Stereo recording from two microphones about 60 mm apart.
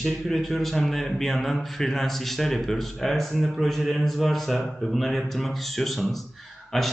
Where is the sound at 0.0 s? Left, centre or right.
Centre.